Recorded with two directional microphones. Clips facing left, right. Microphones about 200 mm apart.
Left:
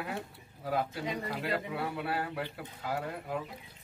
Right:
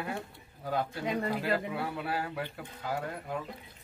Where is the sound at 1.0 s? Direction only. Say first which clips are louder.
Right 4 dB; 55° right (ahead or behind).